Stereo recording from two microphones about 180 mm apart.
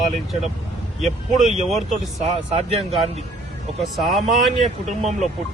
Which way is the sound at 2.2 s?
35° right (ahead or behind).